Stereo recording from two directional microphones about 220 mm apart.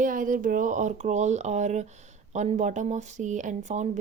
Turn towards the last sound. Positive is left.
turn(degrees=-30)  # may be behind; listen again after turning